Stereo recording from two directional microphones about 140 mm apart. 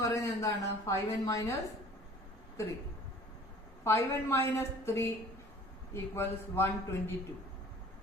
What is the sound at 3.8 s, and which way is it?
A woman's voice, 20° left (ahead or behind).